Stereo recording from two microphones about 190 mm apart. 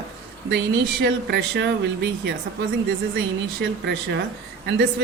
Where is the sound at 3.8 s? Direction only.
60° right (ahead or behind).